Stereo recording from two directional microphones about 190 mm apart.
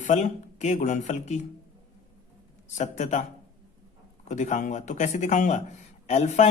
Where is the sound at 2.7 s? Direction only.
40° left (ahead or behind).